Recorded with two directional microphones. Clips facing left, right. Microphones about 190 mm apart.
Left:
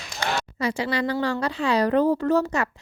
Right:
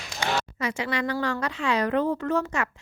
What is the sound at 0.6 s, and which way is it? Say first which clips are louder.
A woman's voice: left 6 dB; 35° left (ahead or behind).